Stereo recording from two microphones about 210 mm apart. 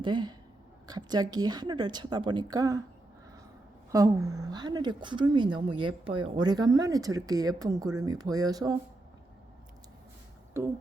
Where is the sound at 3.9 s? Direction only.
15° right (ahead or behind).